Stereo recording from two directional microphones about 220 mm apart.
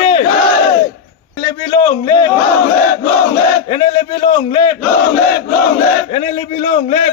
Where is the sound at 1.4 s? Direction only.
20° left (ahead or behind).